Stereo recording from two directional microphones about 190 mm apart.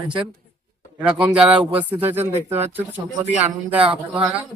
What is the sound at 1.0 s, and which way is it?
A man's voice, 5° right (ahead or behind).